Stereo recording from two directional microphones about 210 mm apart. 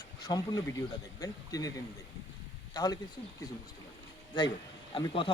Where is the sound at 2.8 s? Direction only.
20° left (ahead or behind).